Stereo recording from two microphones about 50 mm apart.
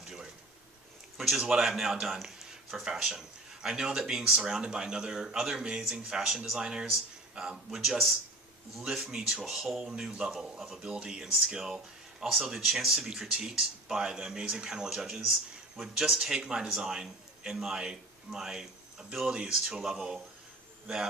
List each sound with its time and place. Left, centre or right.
1.4 s a man's voice: centre
9.4 s speech: centre
10.8 s a man's voice: centre